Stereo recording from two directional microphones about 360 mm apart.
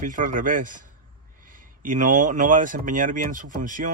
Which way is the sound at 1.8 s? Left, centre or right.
Right.